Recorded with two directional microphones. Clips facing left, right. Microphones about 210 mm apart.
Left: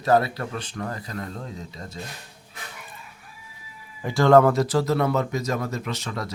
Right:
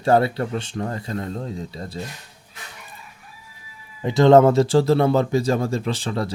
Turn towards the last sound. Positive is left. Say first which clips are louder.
# right 6 dB
turn(degrees=-30)  # may be behind; listen again after turning